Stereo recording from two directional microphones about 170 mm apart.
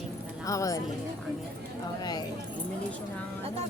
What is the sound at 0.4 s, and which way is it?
Speech, 20° left (ahead or behind).